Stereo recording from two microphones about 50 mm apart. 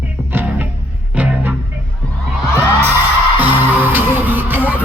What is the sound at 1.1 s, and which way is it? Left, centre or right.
Music, right.